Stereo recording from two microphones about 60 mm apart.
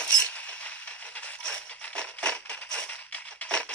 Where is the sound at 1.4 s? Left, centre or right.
Centre.